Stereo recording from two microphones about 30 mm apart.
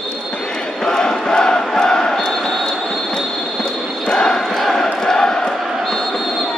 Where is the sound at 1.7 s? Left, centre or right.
Left.